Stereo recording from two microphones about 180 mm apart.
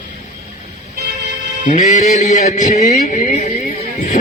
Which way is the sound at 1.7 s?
40° left (ahead or behind).